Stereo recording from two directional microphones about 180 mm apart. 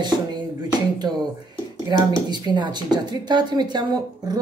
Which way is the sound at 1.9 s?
20° right (ahead or behind).